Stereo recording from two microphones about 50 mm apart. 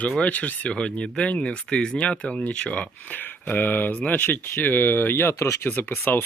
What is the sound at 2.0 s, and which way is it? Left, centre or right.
Speech, left.